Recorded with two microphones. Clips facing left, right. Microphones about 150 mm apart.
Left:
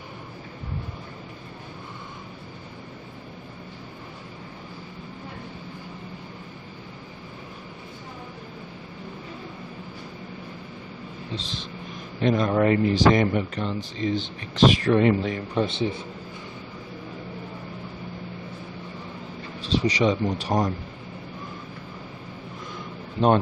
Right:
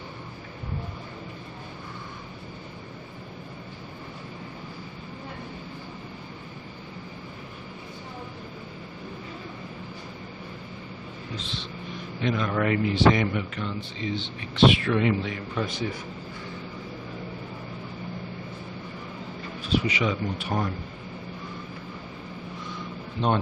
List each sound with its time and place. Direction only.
12.2 s a man's voice: 35° left (ahead or behind)
19.6 s speech: 35° left (ahead or behind)